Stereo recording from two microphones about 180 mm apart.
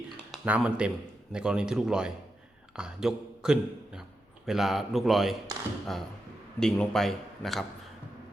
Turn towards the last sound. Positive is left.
turn(degrees=0)  # may be behind; listen again after turning